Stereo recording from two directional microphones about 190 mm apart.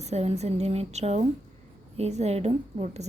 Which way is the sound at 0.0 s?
35° right (ahead or behind).